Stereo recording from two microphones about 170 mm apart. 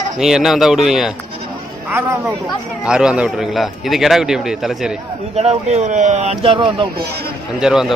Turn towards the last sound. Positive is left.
turn(degrees=-5)  # may be behind; listen again after turning